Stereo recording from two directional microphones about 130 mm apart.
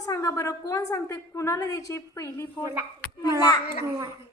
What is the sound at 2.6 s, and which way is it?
Speech, 25° right (ahead or behind).